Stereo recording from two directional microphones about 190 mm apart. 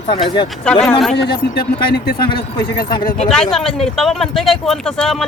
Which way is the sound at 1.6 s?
55° left (ahead or behind).